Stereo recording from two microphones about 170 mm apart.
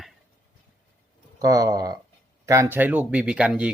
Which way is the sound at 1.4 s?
20° right (ahead or behind).